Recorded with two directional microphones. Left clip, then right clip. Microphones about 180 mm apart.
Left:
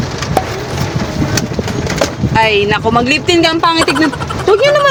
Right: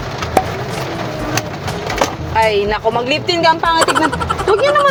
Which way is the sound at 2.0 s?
10° left (ahead or behind).